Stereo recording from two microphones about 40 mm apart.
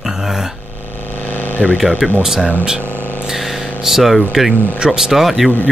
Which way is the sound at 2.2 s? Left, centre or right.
Centre.